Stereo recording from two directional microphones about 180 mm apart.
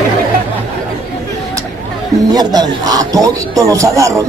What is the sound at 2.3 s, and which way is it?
Beatboxing, 20° right (ahead or behind).